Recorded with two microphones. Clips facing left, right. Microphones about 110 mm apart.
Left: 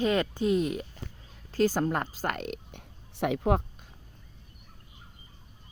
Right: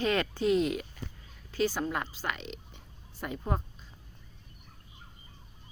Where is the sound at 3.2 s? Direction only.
85° left.